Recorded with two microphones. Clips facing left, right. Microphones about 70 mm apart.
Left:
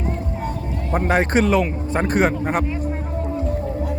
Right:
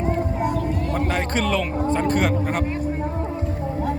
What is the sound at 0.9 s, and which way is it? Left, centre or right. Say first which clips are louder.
Speech: left 8 dB; left.